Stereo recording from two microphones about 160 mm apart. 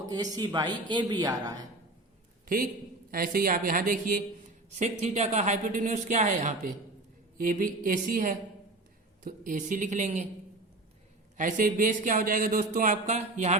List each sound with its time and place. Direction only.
0.1 s speech: 25° right (ahead or behind)
3.1 s speech: 65° right (ahead or behind)
4.7 s speech: 45° right (ahead or behind)
11.3 s speech: 55° right (ahead or behind)